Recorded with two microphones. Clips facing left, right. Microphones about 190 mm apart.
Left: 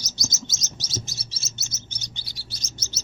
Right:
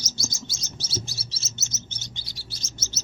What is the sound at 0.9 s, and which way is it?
Chirp, 40° left (ahead or behind).